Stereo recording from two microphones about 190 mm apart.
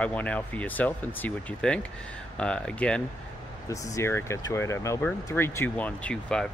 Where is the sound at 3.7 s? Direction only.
15° left (ahead or behind).